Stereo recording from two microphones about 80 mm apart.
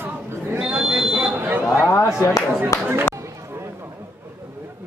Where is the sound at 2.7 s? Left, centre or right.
Left.